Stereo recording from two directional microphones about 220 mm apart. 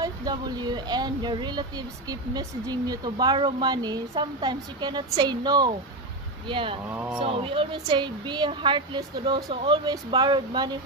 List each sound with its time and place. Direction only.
0.0 s speech: 15° right (ahead or behind)
6.9 s speech: 10° right (ahead or behind)
7.2 s speech: 25° right (ahead or behind)